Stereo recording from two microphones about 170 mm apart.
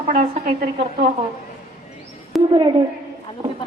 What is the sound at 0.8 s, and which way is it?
Speech, 35° right (ahead or behind).